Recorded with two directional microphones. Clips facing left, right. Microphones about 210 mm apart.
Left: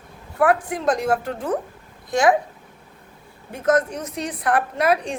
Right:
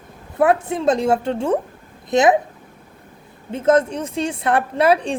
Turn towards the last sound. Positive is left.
turn(degrees=-30)  # may be behind; listen again after turning